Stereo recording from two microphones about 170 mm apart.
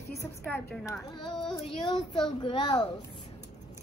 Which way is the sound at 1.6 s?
35° left (ahead or behind).